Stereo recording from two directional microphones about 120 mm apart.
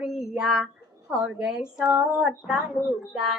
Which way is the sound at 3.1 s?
5° right (ahead or behind).